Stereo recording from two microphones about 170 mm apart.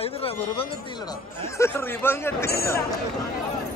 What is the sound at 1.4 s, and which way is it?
Speech, 15° left (ahead or behind).